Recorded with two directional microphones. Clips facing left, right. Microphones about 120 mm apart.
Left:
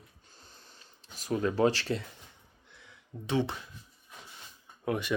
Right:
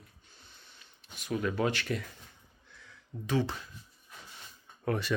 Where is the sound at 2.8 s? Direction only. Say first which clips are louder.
Right 1 dB; 20° left (ahead or behind).